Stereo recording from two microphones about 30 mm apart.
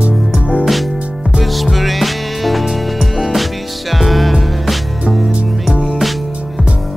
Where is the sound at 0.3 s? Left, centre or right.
Centre.